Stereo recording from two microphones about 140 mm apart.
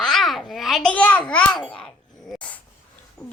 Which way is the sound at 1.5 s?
30° left (ahead or behind).